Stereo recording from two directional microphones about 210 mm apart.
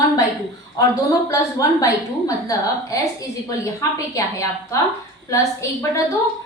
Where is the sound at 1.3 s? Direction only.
15° left (ahead or behind).